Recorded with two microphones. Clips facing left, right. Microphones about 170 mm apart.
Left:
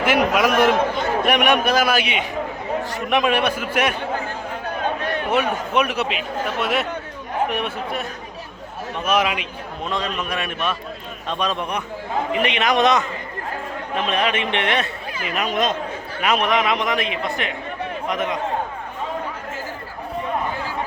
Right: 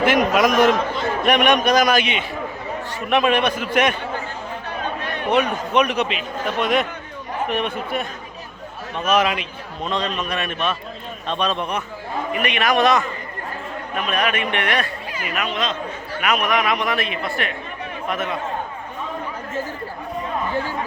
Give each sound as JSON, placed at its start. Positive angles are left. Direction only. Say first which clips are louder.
{"t": 0.0, "sound": "a man's voice", "louder": "right 1 dB", "side_deg": 10}
{"t": 5.3, "sound": "a man's voice", "louder": "right 3 dB", "side_deg": 5}
{"t": 9.0, "sound": "a man's voice", "louder": "right 2 dB", "side_deg": 10}
{"t": 15.4, "sound": "speech", "louder": "left 3 dB", "side_deg": 45}
{"t": 16.2, "sound": "a man's voice", "louder": "left 1 dB", "side_deg": 30}